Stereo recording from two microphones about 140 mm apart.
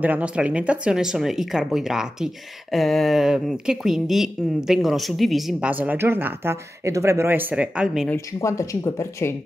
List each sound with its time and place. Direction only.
0.0 s speech: 10° right (ahead or behind)
8.3 s speech: 20° left (ahead or behind)